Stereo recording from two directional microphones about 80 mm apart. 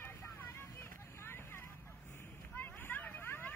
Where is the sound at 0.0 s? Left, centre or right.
Left.